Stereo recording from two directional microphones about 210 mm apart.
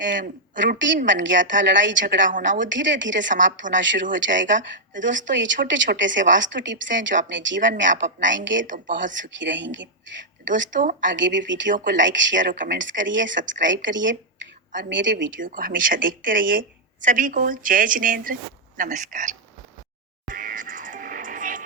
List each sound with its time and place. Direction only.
0.0 s speech: 60° right (ahead or behind)
2.1 s a woman's voice: 40° right (ahead or behind)
2.6 s speech: 60° right (ahead or behind)
10.7 s a woman's voice: 40° right (ahead or behind)
11.1 s speech: 60° right (ahead or behind)
15.3 s a woman's voice: 40° right (ahead or behind)
20.3 s music: 40° right (ahead or behind)